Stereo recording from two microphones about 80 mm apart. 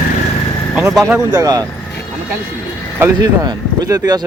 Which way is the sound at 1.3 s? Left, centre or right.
Right.